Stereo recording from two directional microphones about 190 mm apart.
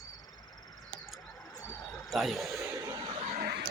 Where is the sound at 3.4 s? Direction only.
60° right (ahead or behind).